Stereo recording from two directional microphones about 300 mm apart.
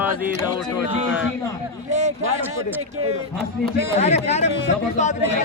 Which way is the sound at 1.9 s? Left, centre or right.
Right.